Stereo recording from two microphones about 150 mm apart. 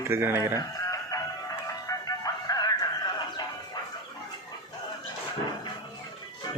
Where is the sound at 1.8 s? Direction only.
25° left (ahead or behind).